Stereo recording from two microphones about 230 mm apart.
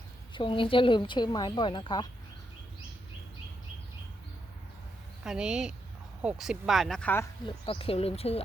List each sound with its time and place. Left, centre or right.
0.3 s speech: left
5.2 s speech: centre
7.4 s speech: left